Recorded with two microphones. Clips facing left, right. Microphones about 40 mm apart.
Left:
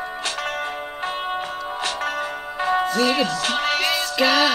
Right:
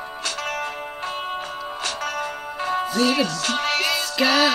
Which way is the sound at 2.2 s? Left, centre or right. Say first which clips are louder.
Left 2 dB; centre.